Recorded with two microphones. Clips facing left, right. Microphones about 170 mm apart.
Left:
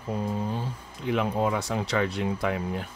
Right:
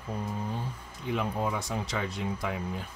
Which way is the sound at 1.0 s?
75° left (ahead or behind).